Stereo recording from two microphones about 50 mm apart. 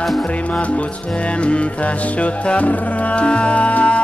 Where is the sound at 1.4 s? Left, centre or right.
Left.